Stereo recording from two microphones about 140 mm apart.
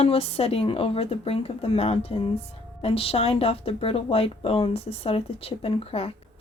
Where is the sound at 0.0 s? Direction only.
45° left (ahead or behind).